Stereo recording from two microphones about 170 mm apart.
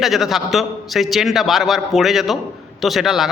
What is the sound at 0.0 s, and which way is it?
A man's voice, centre (ahead or behind).